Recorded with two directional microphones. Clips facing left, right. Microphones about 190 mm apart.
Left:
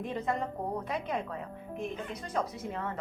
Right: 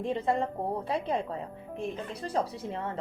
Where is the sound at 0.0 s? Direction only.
30° right (ahead or behind).